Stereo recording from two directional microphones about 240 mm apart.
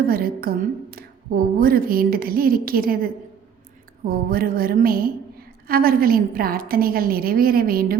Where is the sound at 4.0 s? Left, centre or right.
Right.